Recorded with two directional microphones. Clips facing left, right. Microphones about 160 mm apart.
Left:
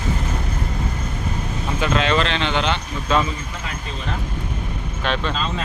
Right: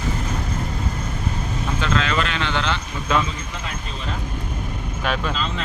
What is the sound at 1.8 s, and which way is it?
Vehicle, 20° left (ahead or behind).